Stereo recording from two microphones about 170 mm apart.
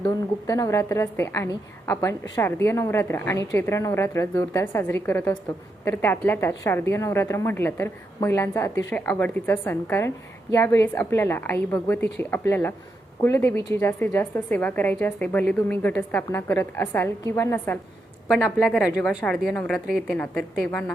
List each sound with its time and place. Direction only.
0.0 s a woman's voice: 20° left (ahead or behind)
18.4 s a woman's voice: centre (ahead or behind)